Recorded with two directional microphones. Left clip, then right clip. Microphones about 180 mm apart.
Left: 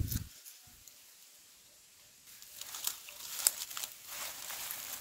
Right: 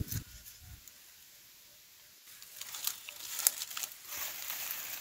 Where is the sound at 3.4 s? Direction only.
10° right (ahead or behind).